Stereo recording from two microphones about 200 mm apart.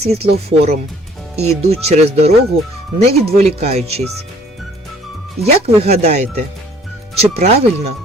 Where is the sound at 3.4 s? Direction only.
30° right (ahead or behind).